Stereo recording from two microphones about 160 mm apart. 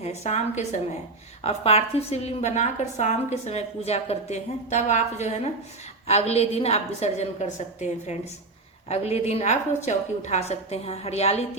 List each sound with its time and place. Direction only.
0.0 s a woman's voice: 40° left (ahead or behind)